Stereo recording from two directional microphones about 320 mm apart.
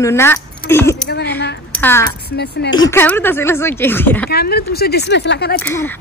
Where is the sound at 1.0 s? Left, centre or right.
Left.